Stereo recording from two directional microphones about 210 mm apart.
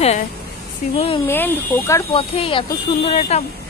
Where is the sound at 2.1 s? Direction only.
25° left (ahead or behind).